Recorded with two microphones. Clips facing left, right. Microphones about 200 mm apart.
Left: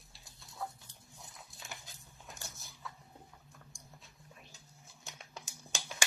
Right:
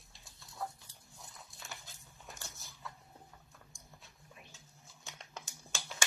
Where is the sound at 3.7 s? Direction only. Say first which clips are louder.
Left 2 dB; centre (ahead or behind).